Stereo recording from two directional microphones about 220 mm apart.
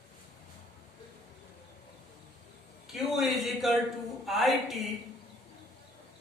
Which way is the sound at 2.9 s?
Centre (ahead or behind).